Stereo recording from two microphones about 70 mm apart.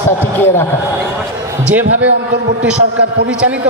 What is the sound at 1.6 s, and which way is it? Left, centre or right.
Speech, right.